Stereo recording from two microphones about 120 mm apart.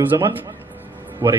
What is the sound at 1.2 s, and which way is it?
Speech, 25° right (ahead or behind).